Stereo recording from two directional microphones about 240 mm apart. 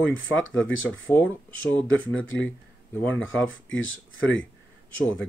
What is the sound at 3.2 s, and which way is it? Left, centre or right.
Speech, left.